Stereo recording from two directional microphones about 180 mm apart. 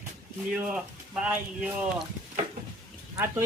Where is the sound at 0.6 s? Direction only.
5° right (ahead or behind).